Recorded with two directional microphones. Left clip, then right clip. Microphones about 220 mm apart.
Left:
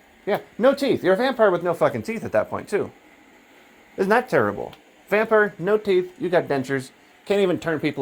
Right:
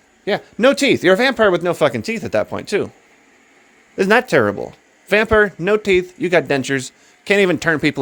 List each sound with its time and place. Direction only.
0.3 s speech: 55° right (ahead or behind)
2.1 s speech: 85° right
2.7 s speech: 60° right (ahead or behind)
3.9 s speech: 50° right (ahead or behind)